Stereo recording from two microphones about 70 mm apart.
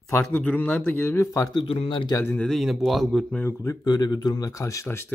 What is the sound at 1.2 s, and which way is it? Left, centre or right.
Speech, left.